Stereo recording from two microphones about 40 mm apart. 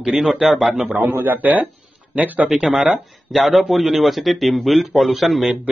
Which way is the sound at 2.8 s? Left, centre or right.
Centre.